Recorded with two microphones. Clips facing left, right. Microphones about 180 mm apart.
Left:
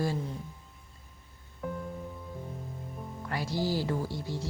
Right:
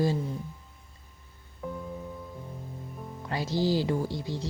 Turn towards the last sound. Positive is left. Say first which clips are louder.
# right 3 dB
turn(degrees=-20)  # may be behind; listen again after turning